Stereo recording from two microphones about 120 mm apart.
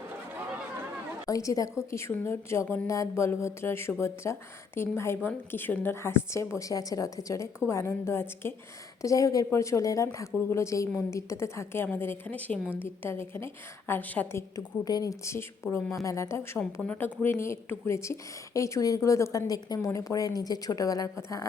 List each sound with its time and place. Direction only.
1.3 s a woman's voice: 30° left (ahead or behind)
14.5 s a woman's voice: 30° left (ahead or behind)